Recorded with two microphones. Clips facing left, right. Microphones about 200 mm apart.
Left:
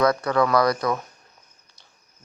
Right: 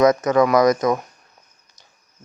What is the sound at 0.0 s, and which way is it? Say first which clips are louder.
Speech: right 5 dB; 20° right (ahead or behind).